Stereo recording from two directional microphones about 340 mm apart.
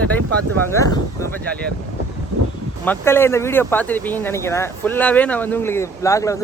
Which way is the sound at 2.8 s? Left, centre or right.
Centre.